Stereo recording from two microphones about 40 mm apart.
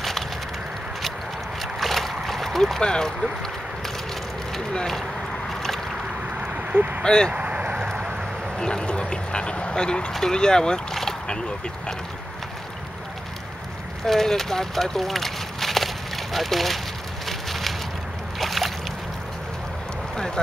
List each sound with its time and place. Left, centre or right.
1.8 s vehicle: centre
2.8 s speech: left
6.4 s a sound: right
7.0 s speech: centre
7.3 s vehicle: right
8.5 s speech: left
14.0 s speech: centre
17.3 s a sound: centre
20.2 s a sound: centre